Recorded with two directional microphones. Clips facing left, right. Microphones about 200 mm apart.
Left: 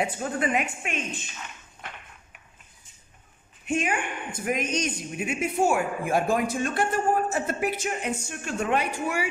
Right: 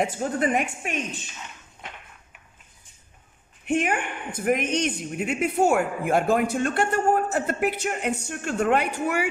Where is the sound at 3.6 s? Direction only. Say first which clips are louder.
Right 3 dB; 60° right (ahead or behind).